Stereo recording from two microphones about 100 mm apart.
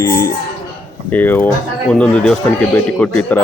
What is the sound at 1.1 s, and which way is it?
Speech, 20° left (ahead or behind).